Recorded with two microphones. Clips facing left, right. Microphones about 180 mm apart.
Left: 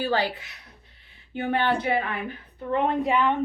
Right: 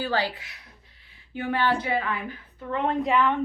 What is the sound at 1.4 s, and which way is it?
Speech, 25° left (ahead or behind).